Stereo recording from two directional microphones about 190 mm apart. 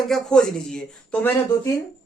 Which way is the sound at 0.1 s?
5° left (ahead or behind).